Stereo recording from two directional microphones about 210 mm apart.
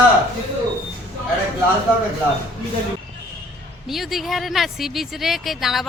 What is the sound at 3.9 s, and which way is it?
Speech, centre (ahead or behind).